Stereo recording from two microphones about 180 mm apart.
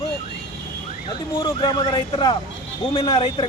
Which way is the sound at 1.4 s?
20° left (ahead or behind).